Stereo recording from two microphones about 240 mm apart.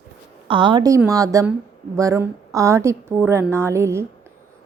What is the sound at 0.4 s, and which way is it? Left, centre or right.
A woman's voice, centre.